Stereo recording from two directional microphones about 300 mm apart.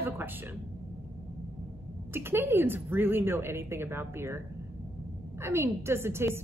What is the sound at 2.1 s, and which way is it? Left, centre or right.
A woman's voice, centre.